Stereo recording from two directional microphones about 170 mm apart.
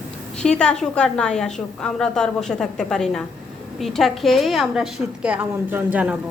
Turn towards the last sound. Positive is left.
turn(degrees=-10)  # may be behind; listen again after turning